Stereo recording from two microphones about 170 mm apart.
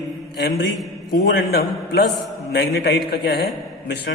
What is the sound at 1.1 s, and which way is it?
A man's voice, 70° left (ahead or behind).